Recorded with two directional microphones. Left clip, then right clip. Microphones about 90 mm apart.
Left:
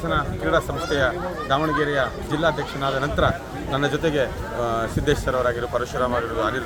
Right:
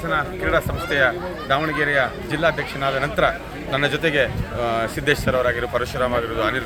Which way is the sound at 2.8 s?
35° right (ahead or behind).